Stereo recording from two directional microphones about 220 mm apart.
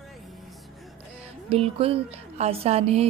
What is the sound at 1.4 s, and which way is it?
A woman's voice, 25° right (ahead or behind).